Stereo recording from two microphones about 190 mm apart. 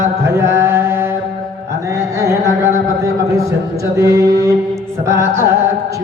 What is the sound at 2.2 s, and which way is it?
Carnatic music, 15° right (ahead or behind).